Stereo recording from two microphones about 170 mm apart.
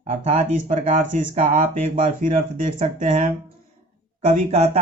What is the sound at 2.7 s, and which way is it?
Speech, 45° right (ahead or behind).